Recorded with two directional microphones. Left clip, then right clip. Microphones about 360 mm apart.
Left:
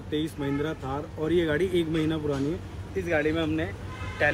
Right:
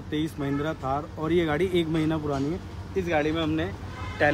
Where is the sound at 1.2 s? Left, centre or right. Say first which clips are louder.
Left 1 dB; centre.